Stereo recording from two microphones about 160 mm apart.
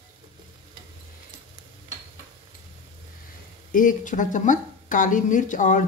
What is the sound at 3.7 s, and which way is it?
Speech, 55° left (ahead or behind).